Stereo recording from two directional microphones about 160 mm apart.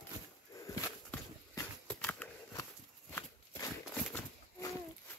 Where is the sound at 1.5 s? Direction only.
20° left (ahead or behind).